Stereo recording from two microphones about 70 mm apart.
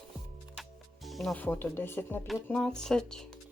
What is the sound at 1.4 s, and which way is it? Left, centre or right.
Speech, left.